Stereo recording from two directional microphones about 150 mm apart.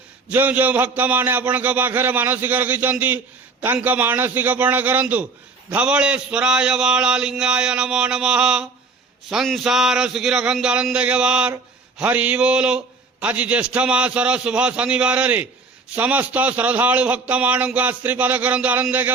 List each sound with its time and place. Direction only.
0.3 s a man's voice: 10° right (ahead or behind)